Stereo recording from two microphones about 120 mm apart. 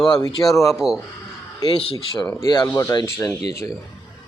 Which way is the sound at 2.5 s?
30° left (ahead or behind).